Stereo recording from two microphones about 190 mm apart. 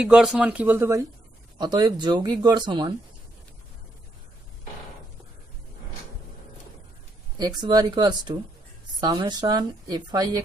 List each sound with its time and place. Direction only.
0.0 s a woman's voice: centre (ahead or behind); by 2.9 s 25° right (ahead or behind)
7.3 s a woman's voice: 20° right (ahead or behind)